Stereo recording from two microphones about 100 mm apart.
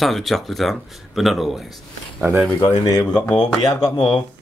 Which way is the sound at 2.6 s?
35° left (ahead or behind).